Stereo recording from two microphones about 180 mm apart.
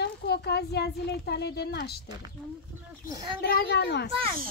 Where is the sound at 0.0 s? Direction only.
65° left (ahead or behind).